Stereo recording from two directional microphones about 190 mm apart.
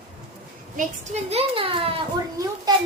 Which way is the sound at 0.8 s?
40° right (ahead or behind).